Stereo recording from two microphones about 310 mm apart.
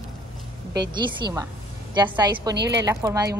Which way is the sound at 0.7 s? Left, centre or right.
Centre.